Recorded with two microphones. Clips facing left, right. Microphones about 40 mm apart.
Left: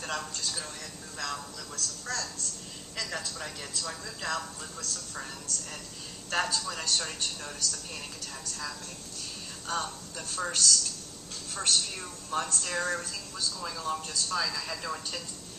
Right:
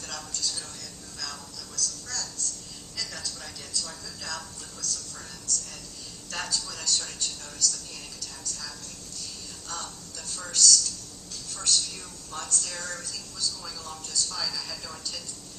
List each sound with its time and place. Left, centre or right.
0.0 s a woman's voice: left